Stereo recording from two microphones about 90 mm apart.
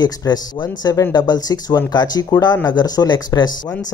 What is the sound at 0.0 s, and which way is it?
Speech, 45° left (ahead or behind).